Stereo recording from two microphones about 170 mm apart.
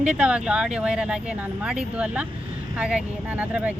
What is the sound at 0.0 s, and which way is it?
Speech, 5° right (ahead or behind).